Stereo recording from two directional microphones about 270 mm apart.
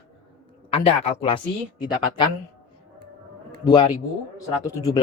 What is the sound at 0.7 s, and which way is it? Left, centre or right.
Speech, left.